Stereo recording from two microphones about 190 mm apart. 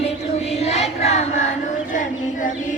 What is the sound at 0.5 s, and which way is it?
Child singing, 35° left (ahead or behind).